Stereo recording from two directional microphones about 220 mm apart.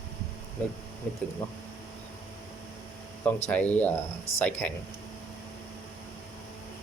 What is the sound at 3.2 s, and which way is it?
Speech, 5° left (ahead or behind).